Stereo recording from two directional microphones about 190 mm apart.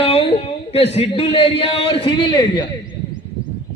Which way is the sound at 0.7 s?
30° left (ahead or behind).